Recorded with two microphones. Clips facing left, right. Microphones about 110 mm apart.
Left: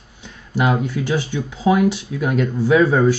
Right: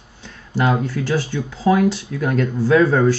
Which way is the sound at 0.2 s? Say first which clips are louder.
Even; 15° left (ahead or behind).